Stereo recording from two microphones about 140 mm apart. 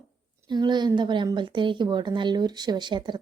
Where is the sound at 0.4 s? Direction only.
30° right (ahead or behind).